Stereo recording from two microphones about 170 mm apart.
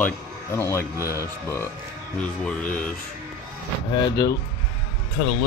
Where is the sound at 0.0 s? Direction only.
15° left (ahead or behind).